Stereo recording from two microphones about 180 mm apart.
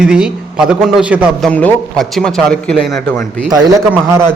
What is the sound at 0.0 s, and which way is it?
A man's voice, 5° right (ahead or behind).